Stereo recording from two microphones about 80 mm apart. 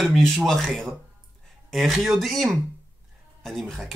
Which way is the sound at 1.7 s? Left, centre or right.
Centre.